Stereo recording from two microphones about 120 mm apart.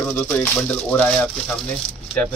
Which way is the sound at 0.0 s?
15° left (ahead or behind).